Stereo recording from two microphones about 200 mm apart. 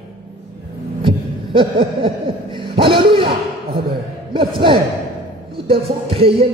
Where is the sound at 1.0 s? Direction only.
25° right (ahead or behind).